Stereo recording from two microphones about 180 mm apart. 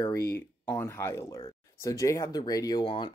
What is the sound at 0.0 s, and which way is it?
Speech, 15° left (ahead or behind).